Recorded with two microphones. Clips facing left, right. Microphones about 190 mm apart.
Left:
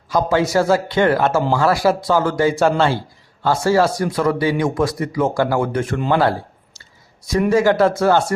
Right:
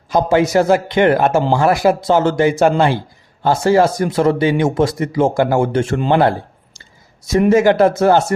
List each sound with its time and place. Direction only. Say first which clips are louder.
0.1 s speech: right 3 dB; 20° right (ahead or behind)